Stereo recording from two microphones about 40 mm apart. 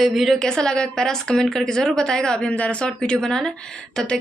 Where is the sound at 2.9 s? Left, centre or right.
Left.